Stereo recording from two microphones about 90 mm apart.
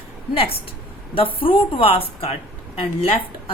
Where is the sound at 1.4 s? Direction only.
80° left.